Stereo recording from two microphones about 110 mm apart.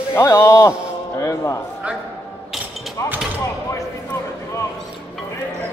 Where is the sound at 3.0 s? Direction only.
30° left (ahead or behind).